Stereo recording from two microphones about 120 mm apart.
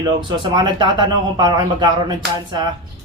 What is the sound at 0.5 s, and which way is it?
Speech, 40° right (ahead or behind).